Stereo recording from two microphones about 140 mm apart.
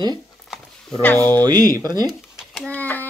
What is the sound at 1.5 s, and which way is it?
Speech, 25° right (ahead or behind).